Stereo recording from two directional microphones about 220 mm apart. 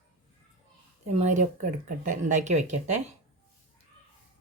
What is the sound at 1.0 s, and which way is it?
Speech, 30° right (ahead or behind).